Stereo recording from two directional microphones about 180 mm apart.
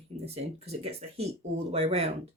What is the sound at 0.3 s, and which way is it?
Speech, 35° right (ahead or behind).